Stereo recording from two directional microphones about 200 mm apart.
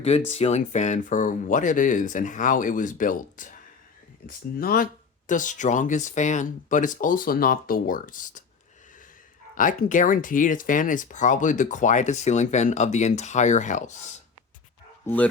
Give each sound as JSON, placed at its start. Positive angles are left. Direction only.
{"t": 0.3, "sound": "speech", "side_deg": 30}
{"t": 9.6, "sound": "speech", "side_deg": 40}
{"t": 15.0, "sound": "speech", "side_deg": 10}